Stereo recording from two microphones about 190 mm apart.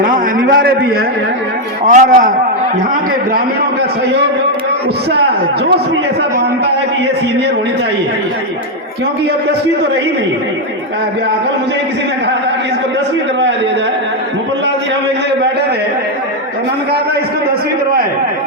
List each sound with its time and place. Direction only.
0.0 s a man's voice: 50° right (ahead or behind)
1.9 s a man's voice: 40° right (ahead or behind)